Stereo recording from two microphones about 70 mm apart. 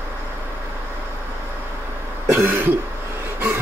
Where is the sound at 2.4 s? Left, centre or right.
Right.